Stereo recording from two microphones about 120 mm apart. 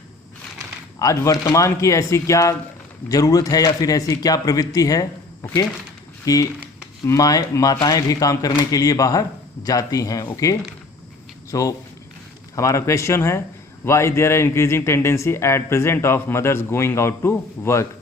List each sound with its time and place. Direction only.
0.9 s speech: 25° left (ahead or behind)
11.5 s speech: 30° left (ahead or behind)